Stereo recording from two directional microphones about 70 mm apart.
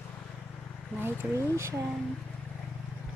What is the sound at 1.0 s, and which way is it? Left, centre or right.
Speech, right.